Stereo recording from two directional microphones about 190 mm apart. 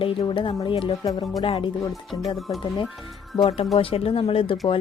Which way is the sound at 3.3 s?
30° left (ahead or behind).